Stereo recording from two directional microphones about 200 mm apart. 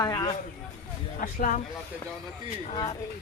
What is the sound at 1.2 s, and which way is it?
Speech, 40° left (ahead or behind).